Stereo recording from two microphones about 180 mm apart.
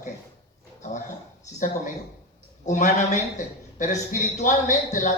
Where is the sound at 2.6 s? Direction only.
40° left (ahead or behind).